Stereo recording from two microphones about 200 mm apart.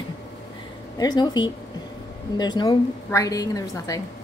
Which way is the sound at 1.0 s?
20° left (ahead or behind).